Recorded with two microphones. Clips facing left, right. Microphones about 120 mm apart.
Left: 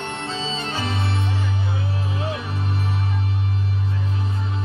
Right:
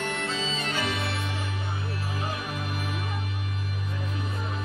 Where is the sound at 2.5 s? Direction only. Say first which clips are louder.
Left 5 dB; 30° left (ahead or behind).